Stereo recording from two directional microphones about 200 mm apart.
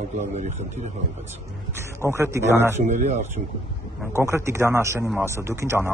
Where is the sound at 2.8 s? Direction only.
40° right (ahead or behind).